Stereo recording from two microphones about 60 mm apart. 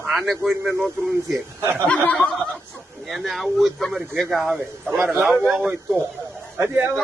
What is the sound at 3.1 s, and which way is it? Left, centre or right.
A man's voice, centre.